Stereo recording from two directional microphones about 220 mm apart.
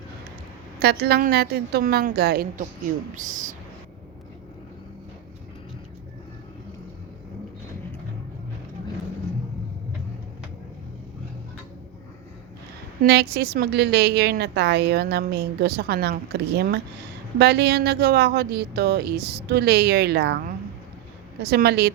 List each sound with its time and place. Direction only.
0.8 s a woman's voice: 45° right (ahead or behind)
13.0 s a woman's voice: 45° right (ahead or behind)
21.4 s a woman's voice: 45° right (ahead or behind)